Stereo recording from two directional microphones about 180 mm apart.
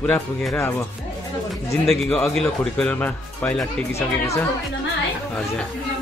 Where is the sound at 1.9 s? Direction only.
Centre (ahead or behind).